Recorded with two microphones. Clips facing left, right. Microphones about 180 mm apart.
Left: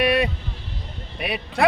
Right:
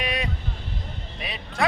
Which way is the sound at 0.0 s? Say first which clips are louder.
Left 10 dB; 60° left (ahead or behind).